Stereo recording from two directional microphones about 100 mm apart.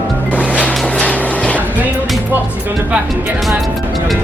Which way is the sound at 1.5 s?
15° right (ahead or behind).